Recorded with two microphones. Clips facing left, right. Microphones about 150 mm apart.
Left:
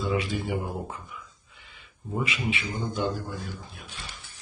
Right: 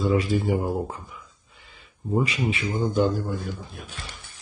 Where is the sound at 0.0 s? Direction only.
40° right (ahead or behind).